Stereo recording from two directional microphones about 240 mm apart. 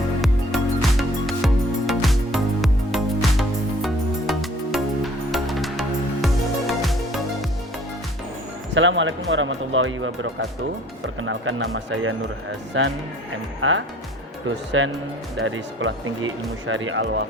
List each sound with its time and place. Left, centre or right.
0.2 s music: centre
8.7 s speech: right